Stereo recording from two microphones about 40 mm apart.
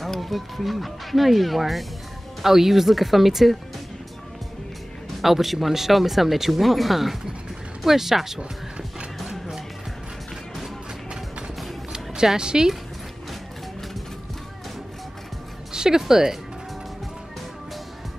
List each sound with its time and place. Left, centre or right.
0.0 s speech: centre
5.2 s speech: centre
9.2 s music: centre
12.4 s speech: centre
15.7 s speech: centre